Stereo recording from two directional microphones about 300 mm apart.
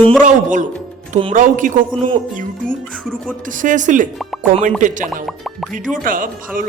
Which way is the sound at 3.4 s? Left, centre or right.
Right.